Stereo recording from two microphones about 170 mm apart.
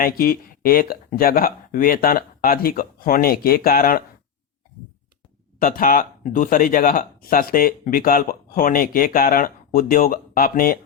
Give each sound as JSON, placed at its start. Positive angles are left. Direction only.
{"t": 0.0, "sound": "speech", "side_deg": 60}
{"t": 5.5, "sound": "speech", "side_deg": 55}